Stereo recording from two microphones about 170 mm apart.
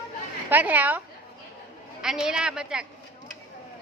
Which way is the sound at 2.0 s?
5° right (ahead or behind).